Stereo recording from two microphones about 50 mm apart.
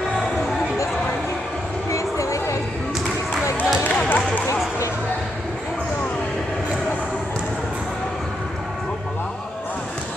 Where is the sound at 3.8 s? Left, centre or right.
Left.